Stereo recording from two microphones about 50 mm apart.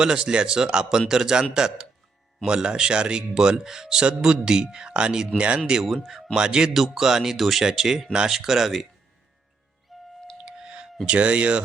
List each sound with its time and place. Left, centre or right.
0.0 s speech: centre
5.8 s speech: centre
6.3 s speech: centre
9.9 s music: centre
10.4 s clicking: centre
11.0 s speech: right